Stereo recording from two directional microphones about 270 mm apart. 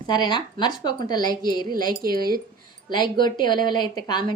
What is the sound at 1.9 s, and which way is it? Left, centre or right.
Speech, right.